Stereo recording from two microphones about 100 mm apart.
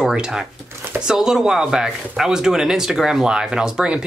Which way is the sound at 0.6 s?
25° right (ahead or behind).